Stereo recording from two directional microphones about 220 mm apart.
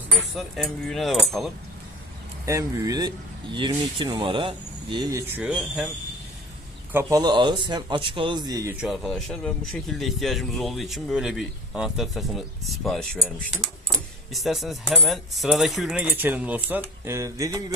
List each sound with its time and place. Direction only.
0.3 s speech: centre (ahead or behind)
2.4 s speech: 15° right (ahead or behind)
5.4 s speech: centre (ahead or behind)
6.9 s speech: 15° right (ahead or behind)
8.8 s speech: centre (ahead or behind)